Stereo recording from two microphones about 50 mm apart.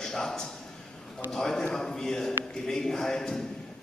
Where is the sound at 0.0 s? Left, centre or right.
Centre.